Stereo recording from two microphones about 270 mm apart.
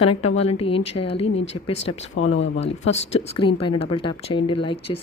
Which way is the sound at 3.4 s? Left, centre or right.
Centre.